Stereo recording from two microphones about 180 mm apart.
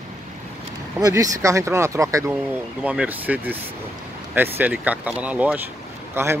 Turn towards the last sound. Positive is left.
turn(degrees=-15)  # may be behind; listen again after turning